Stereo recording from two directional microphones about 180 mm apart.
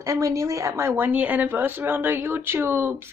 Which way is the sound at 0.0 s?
15° right (ahead or behind).